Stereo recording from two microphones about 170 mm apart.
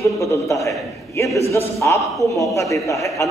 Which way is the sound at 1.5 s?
15° left (ahead or behind).